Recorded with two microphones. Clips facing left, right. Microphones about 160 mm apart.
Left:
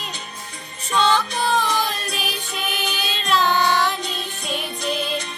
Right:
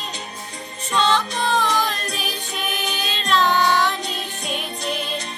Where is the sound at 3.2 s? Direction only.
5° left (ahead or behind).